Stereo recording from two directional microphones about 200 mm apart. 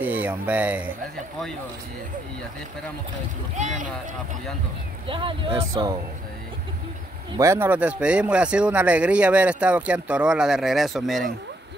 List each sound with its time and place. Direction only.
0.0 s speech: 10° right (ahead or behind)
3.5 s speech: 40° right (ahead or behind)
5.0 s speech: 25° right (ahead or behind)
7.3 s speech: 15° right (ahead or behind)